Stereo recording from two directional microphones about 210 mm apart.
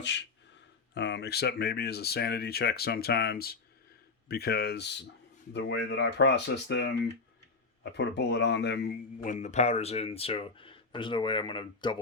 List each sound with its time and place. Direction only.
0.0 s speech: 55° left (ahead or behind)
7.9 s speech: 55° left (ahead or behind); by 11.9 s 20° left (ahead or behind)